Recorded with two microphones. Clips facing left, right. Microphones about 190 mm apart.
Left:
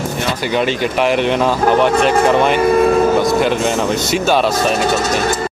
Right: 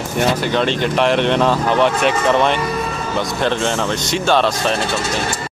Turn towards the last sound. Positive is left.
turn(degrees=5)  # may be behind; listen again after turning